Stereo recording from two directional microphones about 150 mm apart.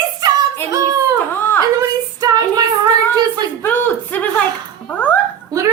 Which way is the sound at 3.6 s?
15° left (ahead or behind).